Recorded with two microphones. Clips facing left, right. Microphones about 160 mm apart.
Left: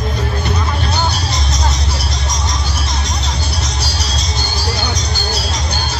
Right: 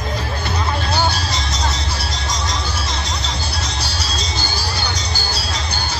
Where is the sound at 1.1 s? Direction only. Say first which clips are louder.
Left 2 dB; 30° right (ahead or behind).